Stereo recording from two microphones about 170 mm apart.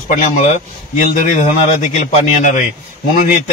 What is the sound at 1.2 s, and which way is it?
A man's voice, 45° left (ahead or behind).